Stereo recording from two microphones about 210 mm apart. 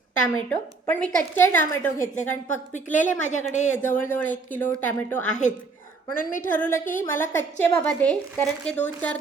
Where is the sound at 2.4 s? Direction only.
35° left (ahead or behind).